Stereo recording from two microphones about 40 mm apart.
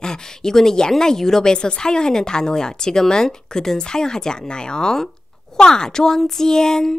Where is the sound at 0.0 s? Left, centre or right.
Centre.